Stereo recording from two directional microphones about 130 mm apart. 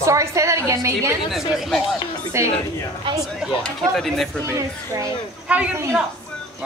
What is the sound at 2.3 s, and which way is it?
Speech, 20° right (ahead or behind).